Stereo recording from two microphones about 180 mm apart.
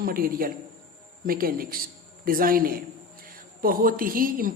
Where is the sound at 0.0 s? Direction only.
55° right (ahead or behind).